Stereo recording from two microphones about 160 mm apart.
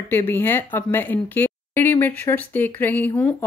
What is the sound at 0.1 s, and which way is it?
Speech, 15° left (ahead or behind).